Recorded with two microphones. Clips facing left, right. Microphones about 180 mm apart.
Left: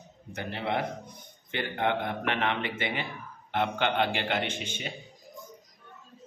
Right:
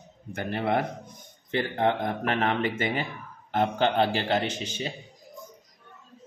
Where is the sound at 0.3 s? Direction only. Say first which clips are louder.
Right 5 dB; 50° right (ahead or behind).